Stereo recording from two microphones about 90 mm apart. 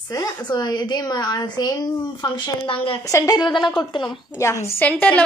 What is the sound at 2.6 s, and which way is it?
Speech, 90° left.